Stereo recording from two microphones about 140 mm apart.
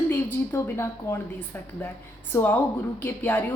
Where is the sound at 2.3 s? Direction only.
15° left (ahead or behind).